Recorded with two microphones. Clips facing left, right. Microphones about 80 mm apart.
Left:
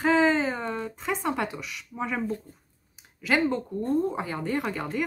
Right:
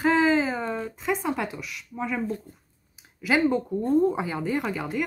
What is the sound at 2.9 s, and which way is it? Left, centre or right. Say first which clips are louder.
Speech: right 1 dB; centre.